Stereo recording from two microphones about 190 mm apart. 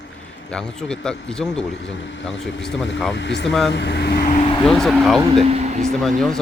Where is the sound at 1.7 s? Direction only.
75° left (ahead or behind).